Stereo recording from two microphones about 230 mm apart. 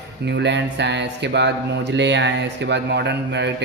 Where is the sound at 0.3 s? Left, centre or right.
Right.